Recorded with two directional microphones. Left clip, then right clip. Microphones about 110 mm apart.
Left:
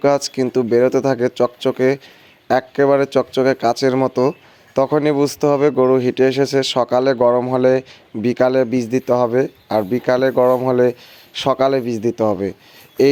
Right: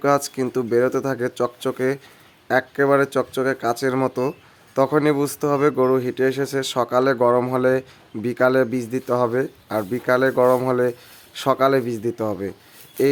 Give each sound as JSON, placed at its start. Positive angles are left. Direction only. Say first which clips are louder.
{"t": 0.0, "sound": "speech", "louder": "left 4 dB", "side_deg": 30}
{"t": 5.8, "sound": "speech", "louder": "left 5 dB", "side_deg": 40}